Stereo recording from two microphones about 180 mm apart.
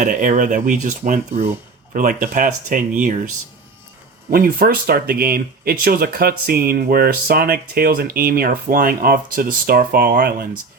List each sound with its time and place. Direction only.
0.0 s speech: 45° right (ahead or behind)
4.3 s speech: 55° right (ahead or behind)